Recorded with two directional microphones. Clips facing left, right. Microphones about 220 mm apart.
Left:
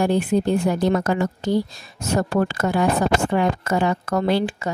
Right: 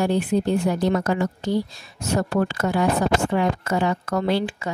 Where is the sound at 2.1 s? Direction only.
45° left (ahead or behind).